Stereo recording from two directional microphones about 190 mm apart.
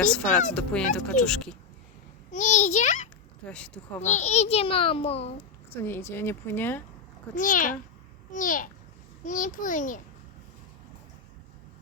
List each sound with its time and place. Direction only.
0.0 s speech: 5° left (ahead or behind)
2.3 s a child's voice: 40° left (ahead or behind)
3.5 s speech: 5° left (ahead or behind)
4.0 s a child's voice: 40° left (ahead or behind)
5.7 s a woman's voice: 10° left (ahead or behind)
7.3 s a child's voice: 45° left (ahead or behind)